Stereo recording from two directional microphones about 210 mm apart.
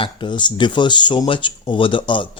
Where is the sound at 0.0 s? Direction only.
20° left (ahead or behind).